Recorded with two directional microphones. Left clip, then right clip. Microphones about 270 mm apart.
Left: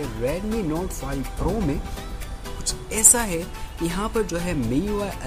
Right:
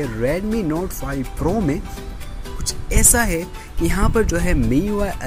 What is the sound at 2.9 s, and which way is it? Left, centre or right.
Speech, centre.